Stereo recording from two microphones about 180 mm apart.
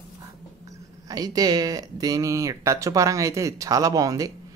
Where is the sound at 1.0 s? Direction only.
20° right (ahead or behind).